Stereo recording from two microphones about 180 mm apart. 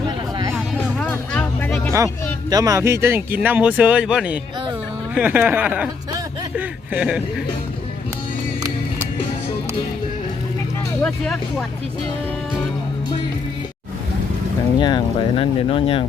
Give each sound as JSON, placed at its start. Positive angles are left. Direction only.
{"t": 0.5, "sound": "music", "side_deg": 5}
{"t": 2.5, "sound": "speech", "side_deg": -20}
{"t": 11.0, "sound": "speech", "side_deg": 5}
{"t": 14.8, "sound": "speech", "side_deg": 25}